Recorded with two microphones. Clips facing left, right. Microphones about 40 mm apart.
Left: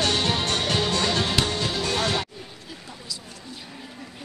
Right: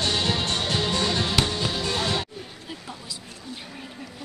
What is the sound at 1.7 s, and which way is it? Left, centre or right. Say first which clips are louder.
Music: left 3 dB; left.